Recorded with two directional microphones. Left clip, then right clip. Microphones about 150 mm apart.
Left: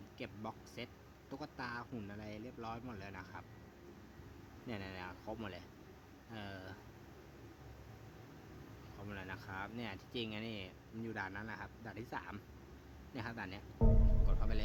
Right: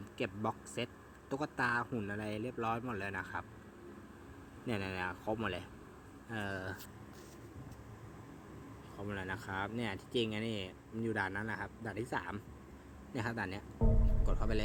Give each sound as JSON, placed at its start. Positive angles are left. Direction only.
{"t": 0.2, "sound": "speech", "side_deg": -25}
{"t": 4.6, "sound": "speech", "side_deg": -15}
{"t": 9.0, "sound": "speech", "side_deg": -15}
{"t": 13.7, "sound": "music", "side_deg": 0}
{"t": 14.3, "sound": "speech", "side_deg": -20}